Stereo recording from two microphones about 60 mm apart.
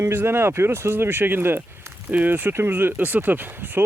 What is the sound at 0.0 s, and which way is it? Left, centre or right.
Speech, right.